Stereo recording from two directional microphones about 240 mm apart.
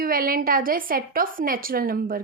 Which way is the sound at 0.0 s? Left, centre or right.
Right.